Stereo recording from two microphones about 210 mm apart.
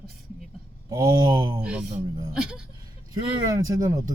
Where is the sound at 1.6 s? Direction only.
5° right (ahead or behind).